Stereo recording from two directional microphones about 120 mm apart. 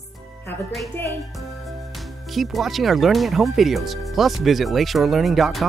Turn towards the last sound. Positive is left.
turn(degrees=0)  # may be behind; listen again after turning